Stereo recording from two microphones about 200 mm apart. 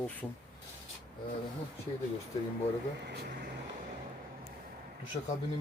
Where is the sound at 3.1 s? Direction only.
55° right (ahead or behind).